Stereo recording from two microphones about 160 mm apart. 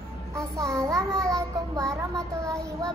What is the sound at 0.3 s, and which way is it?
Child singing, 20° right (ahead or behind).